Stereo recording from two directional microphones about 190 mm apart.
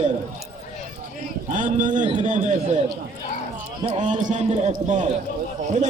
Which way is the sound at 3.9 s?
40° right (ahead or behind).